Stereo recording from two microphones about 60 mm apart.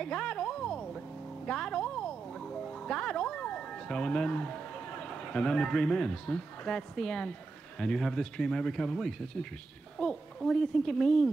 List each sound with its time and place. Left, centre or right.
0.0 s a sound: centre
1.4 s music: centre
5.0 s speech: centre